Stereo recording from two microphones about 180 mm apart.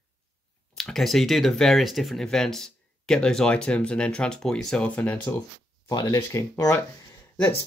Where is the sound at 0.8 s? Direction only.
Centre (ahead or behind).